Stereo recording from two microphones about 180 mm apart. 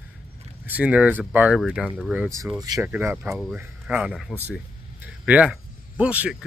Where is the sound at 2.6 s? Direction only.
20° right (ahead or behind).